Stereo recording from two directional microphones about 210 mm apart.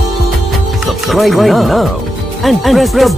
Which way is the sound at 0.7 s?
Centre (ahead or behind).